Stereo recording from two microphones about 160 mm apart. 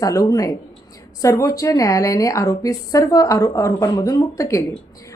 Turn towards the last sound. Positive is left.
turn(degrees=20)  # may be behind; listen again after turning